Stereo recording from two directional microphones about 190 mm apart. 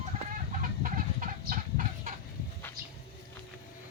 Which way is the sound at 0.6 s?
45° right (ahead or behind).